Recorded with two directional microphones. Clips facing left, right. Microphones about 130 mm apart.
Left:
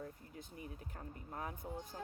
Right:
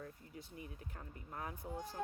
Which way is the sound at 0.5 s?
30° left (ahead or behind).